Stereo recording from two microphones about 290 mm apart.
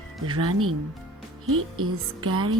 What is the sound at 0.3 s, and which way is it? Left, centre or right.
Music, right.